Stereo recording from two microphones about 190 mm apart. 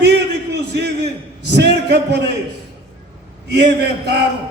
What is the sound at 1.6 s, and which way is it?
Speech, 60° right (ahead or behind).